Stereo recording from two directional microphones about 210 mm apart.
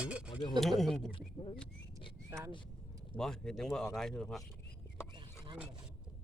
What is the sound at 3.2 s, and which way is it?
Speech, centre (ahead or behind).